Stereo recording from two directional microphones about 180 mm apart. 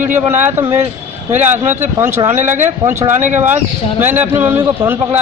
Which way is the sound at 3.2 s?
40° right (ahead or behind).